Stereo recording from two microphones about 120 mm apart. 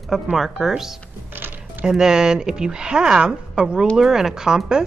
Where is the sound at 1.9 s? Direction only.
5° right (ahead or behind).